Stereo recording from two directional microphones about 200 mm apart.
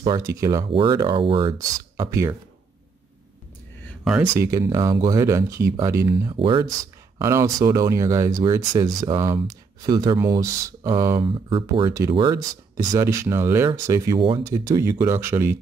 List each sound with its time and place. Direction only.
0.0 s speech: 15° right (ahead or behind)
3.8 s a sound: 5° right (ahead or behind)
4.3 s speech: 15° right (ahead or behind)